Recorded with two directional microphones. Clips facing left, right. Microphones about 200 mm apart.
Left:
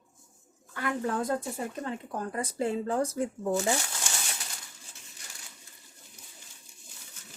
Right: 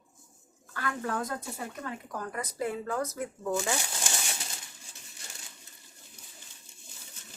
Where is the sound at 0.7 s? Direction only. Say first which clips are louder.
Left 3 dB; 20° left (ahead or behind).